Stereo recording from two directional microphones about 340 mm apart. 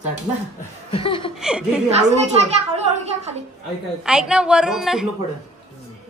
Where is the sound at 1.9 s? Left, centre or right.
Centre.